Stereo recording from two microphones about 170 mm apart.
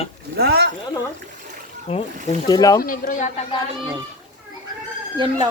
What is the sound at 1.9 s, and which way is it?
Speech, 40° left (ahead or behind).